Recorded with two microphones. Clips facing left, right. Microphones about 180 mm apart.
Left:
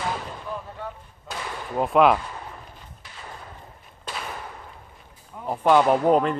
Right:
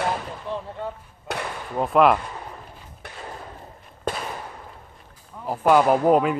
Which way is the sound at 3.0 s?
60° right (ahead or behind).